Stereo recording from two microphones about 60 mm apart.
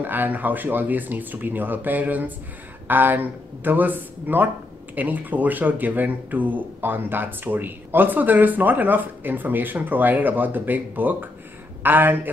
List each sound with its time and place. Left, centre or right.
0.0 s speech: right